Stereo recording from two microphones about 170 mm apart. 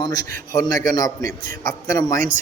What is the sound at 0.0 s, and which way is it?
A man's voice, 20° left (ahead or behind).